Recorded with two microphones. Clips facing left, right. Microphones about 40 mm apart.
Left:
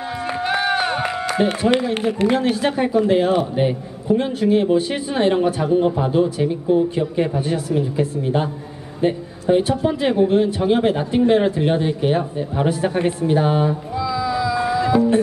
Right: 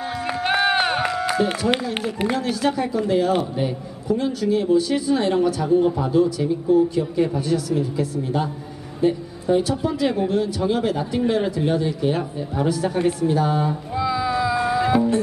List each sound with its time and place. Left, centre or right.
0.5 s run: right
1.4 s a man's voice: left
13.9 s music: right